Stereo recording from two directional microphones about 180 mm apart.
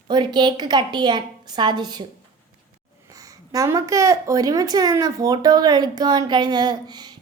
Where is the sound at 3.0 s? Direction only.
20° right (ahead or behind).